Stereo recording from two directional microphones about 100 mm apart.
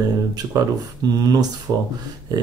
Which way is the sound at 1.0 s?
40° right (ahead or behind).